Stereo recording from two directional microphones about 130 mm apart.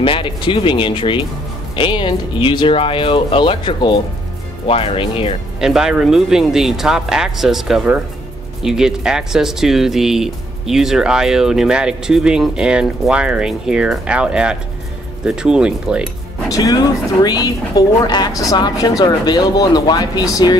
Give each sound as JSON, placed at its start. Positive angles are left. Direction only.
{"t": 0.0, "sound": "speech", "side_deg": 40}
{"t": 5.6, "sound": "speech", "side_deg": -5}
{"t": 16.4, "sound": "speech", "side_deg": 25}